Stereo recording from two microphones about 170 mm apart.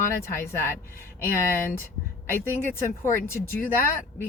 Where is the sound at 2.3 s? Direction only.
15° left (ahead or behind).